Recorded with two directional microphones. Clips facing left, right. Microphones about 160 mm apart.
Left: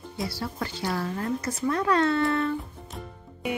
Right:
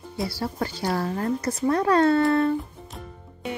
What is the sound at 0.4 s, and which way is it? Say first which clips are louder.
Speech: right 4 dB; 40° right (ahead or behind).